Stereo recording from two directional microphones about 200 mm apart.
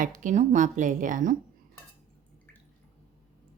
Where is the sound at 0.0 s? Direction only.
40° right (ahead or behind).